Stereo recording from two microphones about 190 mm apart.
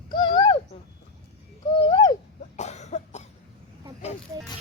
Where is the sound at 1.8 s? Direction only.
25° left (ahead or behind).